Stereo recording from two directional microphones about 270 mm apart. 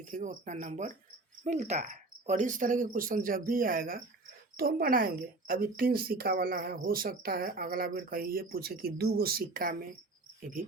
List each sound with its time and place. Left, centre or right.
0.0 s a woman's voice: right